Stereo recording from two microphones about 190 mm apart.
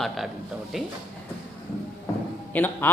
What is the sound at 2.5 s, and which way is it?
Speech, 10° left (ahead or behind).